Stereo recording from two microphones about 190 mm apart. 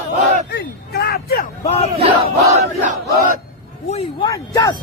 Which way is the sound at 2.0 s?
30° right (ahead or behind).